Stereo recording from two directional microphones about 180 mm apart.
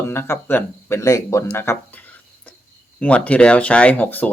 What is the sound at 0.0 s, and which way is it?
Speech, 15° left (ahead or behind).